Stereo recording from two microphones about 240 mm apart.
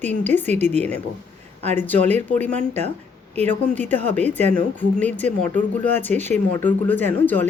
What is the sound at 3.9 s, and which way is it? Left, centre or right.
Speech, centre.